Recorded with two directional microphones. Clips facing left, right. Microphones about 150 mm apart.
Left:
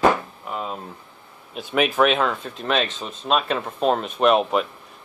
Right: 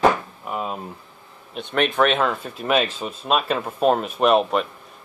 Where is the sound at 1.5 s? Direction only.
5° left (ahead or behind).